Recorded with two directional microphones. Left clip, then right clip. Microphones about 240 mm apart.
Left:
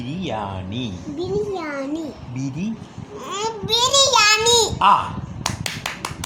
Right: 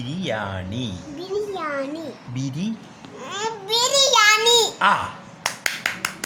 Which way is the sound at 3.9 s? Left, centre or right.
Centre.